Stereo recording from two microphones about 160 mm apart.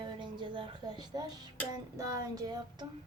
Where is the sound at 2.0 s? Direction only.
20° right (ahead or behind).